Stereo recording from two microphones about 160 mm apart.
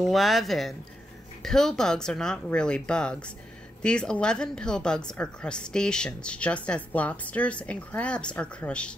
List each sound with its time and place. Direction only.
0.0 s a woman's voice: centre (ahead or behind)